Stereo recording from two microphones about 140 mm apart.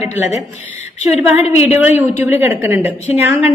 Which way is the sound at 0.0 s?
55° left (ahead or behind).